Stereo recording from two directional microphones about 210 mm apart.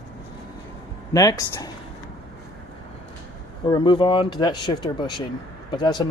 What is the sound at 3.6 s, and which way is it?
A man's voice, 20° left (ahead or behind).